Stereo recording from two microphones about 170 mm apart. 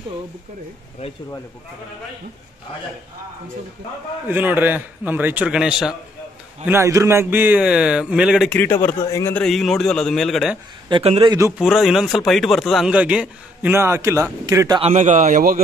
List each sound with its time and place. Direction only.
4.3 s speech: 10° right (ahead or behind)
6.6 s speech: 15° right (ahead or behind)
8.5 s a man's voice: 10° left (ahead or behind)
9.4 s a man's voice: centre (ahead or behind)
10.9 s speech: 35° right (ahead or behind)
11.5 s speech: centre (ahead or behind); by 14.8 s 20° right (ahead or behind)
14.8 s a man's voice: 45° right (ahead or behind)